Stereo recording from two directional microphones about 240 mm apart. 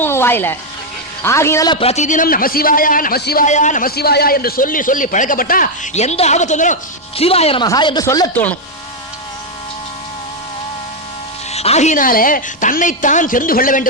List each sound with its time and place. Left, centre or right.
0.0 s a sound: centre
1.2 s a man's voice: centre
11.5 s a man's voice: left